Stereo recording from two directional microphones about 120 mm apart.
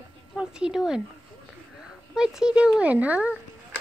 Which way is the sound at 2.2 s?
5° right (ahead or behind).